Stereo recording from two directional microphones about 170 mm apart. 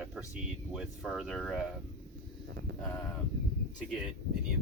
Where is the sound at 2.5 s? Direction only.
75° right (ahead or behind).